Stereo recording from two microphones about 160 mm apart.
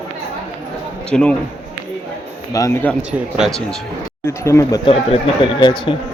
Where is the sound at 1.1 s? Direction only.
5° left (ahead or behind).